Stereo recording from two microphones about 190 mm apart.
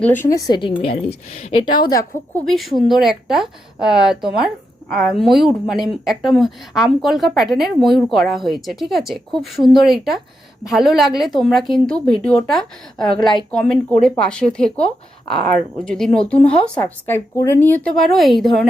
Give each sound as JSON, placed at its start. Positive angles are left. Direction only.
{"t": 0.0, "sound": "a woman's voice", "side_deg": 10}
{"t": 1.4, "sound": "a woman's voice", "side_deg": 35}
{"t": 1.7, "sound": "a woman's voice", "side_deg": 20}
{"t": 2.5, "sound": "a woman's voice", "side_deg": 0}
{"t": 17.8, "sound": "a woman's voice", "side_deg": 0}